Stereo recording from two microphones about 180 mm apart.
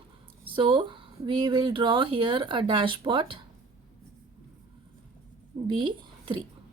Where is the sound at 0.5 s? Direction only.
25° right (ahead or behind).